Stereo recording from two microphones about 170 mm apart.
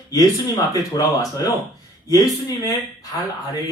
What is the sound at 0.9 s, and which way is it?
Speech, 20° left (ahead or behind).